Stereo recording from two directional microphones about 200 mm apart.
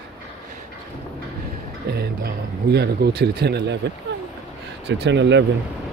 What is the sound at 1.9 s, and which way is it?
Speech, 55° right (ahead or behind).